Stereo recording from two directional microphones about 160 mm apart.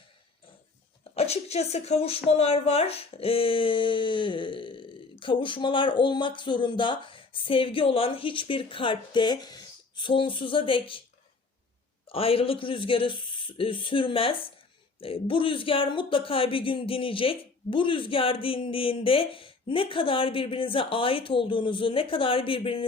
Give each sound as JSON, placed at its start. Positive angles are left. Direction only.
{"t": 1.1, "sound": "speech", "side_deg": 40}
{"t": 12.0, "sound": "speech", "side_deg": 35}